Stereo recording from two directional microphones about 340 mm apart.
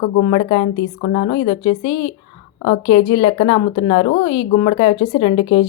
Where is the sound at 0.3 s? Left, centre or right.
Centre.